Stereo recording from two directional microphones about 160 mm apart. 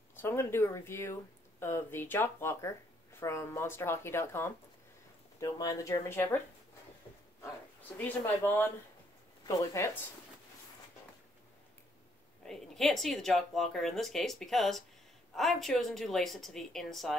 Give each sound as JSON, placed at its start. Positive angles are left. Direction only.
{"t": 0.1, "sound": "speech", "side_deg": 15}
{"t": 8.0, "sound": "speech", "side_deg": 10}
{"t": 12.4, "sound": "speech", "side_deg": 0}